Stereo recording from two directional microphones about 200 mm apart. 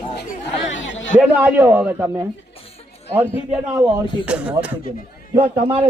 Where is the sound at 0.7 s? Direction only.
70° left (ahead or behind).